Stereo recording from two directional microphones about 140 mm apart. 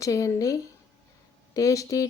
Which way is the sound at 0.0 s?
25° left (ahead or behind).